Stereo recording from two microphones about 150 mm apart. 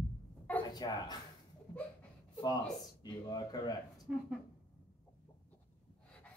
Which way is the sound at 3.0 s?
25° left (ahead or behind).